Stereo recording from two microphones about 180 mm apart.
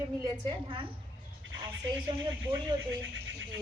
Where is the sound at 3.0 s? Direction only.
90° right.